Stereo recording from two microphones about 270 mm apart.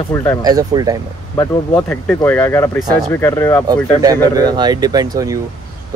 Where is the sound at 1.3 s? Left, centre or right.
Centre.